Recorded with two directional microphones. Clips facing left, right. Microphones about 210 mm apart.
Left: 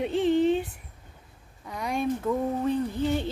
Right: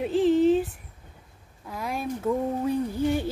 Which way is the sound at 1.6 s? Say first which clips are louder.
Left 3 dB; centre (ahead or behind).